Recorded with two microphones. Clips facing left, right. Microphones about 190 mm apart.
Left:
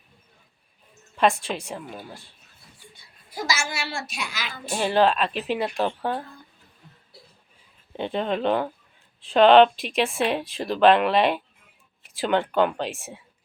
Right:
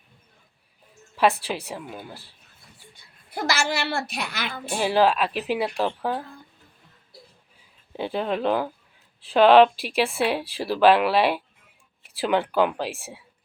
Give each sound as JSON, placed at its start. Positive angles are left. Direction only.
{"t": 1.5, "sound": "speech", "side_deg": -5}
{"t": 3.2, "sound": "a woman's voice", "side_deg": -60}
{"t": 4.8, "sound": "speech", "side_deg": -10}
{"t": 7.9, "sound": "speech", "side_deg": -5}